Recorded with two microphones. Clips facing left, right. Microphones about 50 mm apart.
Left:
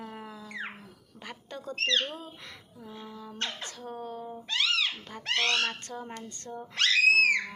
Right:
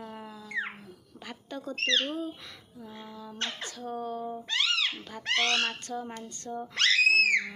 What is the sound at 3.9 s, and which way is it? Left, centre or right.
Speech, right.